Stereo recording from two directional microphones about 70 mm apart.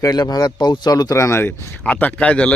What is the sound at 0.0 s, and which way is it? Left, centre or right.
Speech, left.